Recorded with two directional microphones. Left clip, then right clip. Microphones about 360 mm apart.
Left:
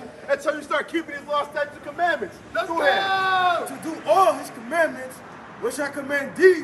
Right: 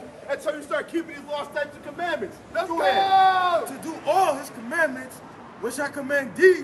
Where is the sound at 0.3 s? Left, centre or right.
Left.